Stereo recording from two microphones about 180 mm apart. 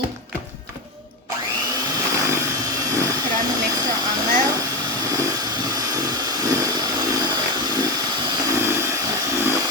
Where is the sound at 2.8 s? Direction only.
15° right (ahead or behind).